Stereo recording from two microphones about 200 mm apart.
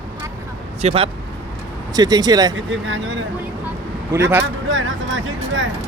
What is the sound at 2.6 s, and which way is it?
Speech, 70° right (ahead or behind).